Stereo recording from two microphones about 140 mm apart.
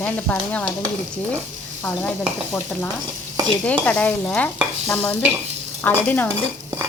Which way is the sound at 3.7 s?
10° left (ahead or behind).